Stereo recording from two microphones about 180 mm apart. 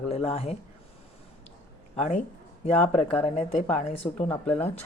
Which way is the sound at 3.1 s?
30° left (ahead or behind).